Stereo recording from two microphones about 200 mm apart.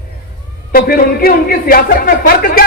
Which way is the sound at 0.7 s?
50° left (ahead or behind).